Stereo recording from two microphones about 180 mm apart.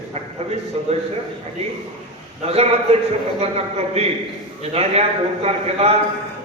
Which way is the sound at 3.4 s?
35° right (ahead or behind).